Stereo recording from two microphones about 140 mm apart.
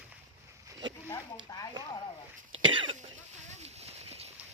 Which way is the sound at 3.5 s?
50° right (ahead or behind).